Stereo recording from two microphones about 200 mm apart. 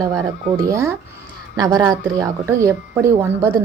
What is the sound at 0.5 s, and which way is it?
A woman's voice, 15° right (ahead or behind).